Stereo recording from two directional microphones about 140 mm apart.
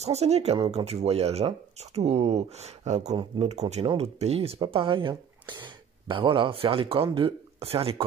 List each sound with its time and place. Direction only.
0.0 s speech: 50° right (ahead or behind)